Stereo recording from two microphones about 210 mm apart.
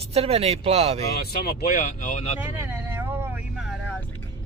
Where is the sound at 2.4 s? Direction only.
10° right (ahead or behind).